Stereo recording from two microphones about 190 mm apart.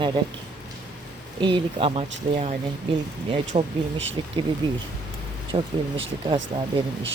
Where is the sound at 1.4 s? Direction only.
25° right (ahead or behind).